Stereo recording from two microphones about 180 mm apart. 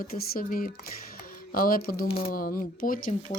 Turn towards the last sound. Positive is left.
turn(degrees=50)  # may be behind; listen again after turning